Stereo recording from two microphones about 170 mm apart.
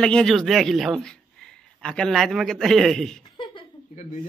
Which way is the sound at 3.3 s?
30° left (ahead or behind).